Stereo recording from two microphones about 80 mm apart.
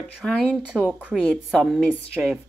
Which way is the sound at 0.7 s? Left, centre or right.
Centre.